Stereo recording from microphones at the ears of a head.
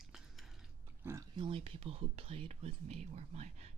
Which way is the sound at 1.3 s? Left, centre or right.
Right.